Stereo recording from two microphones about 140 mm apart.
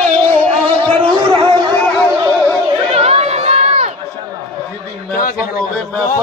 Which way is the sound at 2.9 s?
50° right (ahead or behind).